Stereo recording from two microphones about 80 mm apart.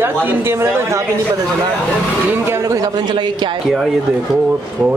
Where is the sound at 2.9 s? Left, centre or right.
Right.